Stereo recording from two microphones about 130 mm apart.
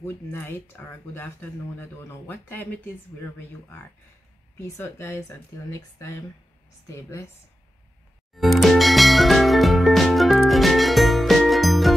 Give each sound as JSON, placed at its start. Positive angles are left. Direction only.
{"t": 0.0, "sound": "speech", "side_deg": 15}
{"t": 8.4, "sound": "music", "side_deg": 0}